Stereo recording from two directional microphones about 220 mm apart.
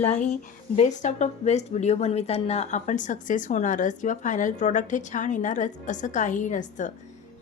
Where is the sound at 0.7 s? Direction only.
35° left (ahead or behind).